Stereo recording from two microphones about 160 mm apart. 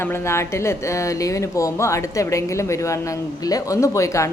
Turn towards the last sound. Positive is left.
turn(degrees=20)  # may be behind; listen again after turning